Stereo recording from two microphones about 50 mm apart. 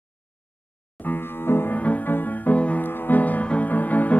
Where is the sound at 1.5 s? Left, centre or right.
Left.